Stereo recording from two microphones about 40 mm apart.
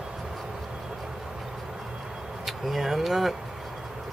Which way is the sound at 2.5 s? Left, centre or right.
Centre.